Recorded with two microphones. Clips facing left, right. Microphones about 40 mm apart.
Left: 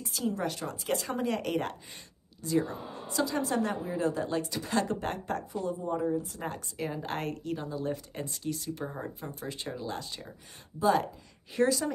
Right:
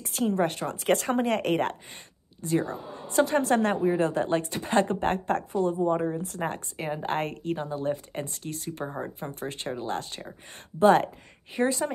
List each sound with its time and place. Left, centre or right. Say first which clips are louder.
0.0 s a woman's voice: right 6 dB; right
2.6 s a woman's voice: right 3 dB; centre
3.1 s a woman's voice: right 7 dB; right
8.8 s speech: right 6 dB; right
9.2 s a woman's voice: right 4 dB; right
11.5 s speech: right 1 dB; right